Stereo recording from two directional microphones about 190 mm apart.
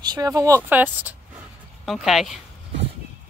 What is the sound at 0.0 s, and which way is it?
Speech, 20° right (ahead or behind).